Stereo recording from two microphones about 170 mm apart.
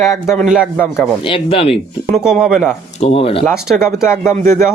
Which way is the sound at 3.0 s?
35° left (ahead or behind).